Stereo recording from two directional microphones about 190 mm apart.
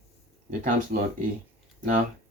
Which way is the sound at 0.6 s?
45° right (ahead or behind).